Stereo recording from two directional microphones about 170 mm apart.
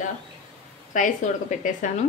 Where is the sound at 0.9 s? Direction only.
45° left (ahead or behind).